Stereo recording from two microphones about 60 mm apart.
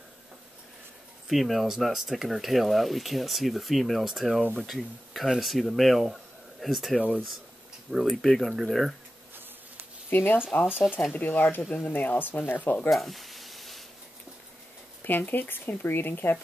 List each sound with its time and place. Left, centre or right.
1.3 s speech: centre
10.0 s speech: left
10.8 s speech: centre
11.1 s speech: left
12.9 s a sound: centre
15.0 s speech: left